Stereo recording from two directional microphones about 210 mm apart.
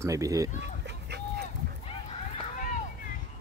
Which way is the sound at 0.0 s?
15° right (ahead or behind).